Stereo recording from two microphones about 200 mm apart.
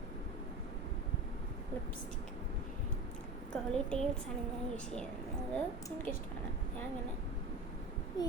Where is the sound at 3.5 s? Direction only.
5° left (ahead or behind).